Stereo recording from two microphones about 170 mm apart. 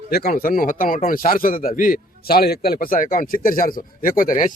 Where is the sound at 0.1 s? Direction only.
60° left (ahead or behind).